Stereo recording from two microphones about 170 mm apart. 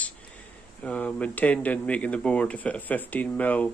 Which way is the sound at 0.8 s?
5° left (ahead or behind).